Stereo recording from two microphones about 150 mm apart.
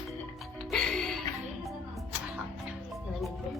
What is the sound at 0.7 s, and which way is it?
Music, 5° left (ahead or behind).